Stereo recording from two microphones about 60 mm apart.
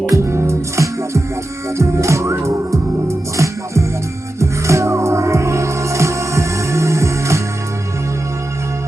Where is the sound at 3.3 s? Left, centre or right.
Right.